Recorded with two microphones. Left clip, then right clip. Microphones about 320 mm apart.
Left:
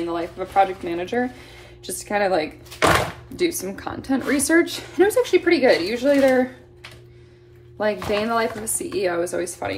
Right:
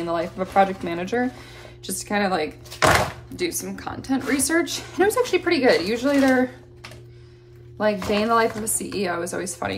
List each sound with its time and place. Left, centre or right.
0.0 s a woman's voice: centre
7.7 s a woman's voice: centre